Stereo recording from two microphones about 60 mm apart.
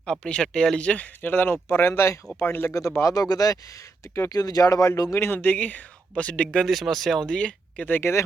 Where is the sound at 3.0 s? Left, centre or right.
Left.